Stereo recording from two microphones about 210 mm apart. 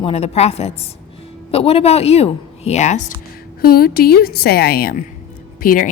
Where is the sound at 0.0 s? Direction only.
30° left (ahead or behind).